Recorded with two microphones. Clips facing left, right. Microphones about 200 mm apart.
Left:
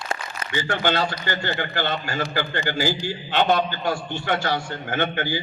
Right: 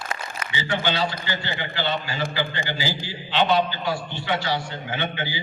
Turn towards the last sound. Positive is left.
turn(degrees=50)  # may be behind; listen again after turning